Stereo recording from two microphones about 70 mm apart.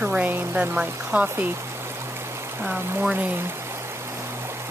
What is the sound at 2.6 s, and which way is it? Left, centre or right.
Speech, centre.